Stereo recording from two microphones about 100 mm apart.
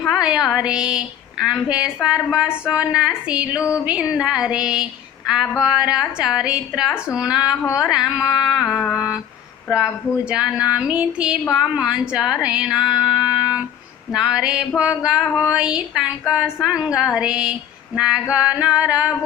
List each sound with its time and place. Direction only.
0.0 s music: centre (ahead or behind)
0.4 s a woman's voice: 10° right (ahead or behind)
3.6 s carnatic music: 30° left (ahead or behind)
3.8 s a woman's voice: 10° right (ahead or behind)
7.6 s carnatic music: 30° left (ahead or behind)
7.9 s a sound: 5° right (ahead or behind)
8.7 s a woman's voice: 5° right (ahead or behind)
9.6 s a sound: 5° right (ahead or behind)
10.2 s a woman's voice: 10° right (ahead or behind)